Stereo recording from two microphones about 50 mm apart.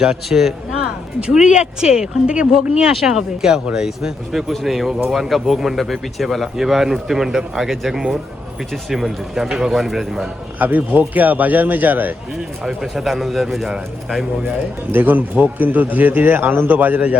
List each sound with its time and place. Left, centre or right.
0.0 s speech: centre
1.2 s speech: centre
4.3 s speech: centre
10.6 s a man's voice: right
12.6 s speech: centre
14.9 s a man's voice: right